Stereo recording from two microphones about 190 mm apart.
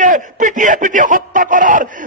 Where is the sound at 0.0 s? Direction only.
40° right (ahead or behind).